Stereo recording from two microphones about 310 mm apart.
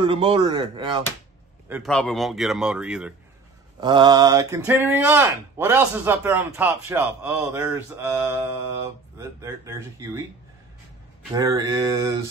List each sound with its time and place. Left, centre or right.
0.0 s speech: centre
1.7 s a man's voice: centre
3.8 s speech: centre
11.3 s speech: centre